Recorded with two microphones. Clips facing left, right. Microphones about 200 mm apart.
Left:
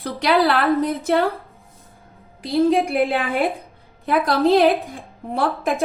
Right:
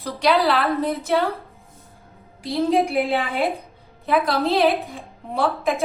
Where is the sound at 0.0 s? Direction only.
55° left (ahead or behind).